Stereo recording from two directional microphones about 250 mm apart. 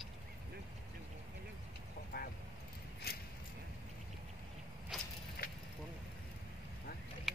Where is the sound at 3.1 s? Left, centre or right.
Left.